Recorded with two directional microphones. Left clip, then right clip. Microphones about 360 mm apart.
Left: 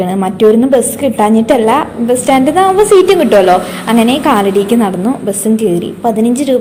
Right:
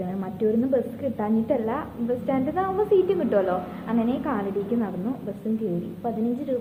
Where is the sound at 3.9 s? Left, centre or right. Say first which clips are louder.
Left 17 dB; left.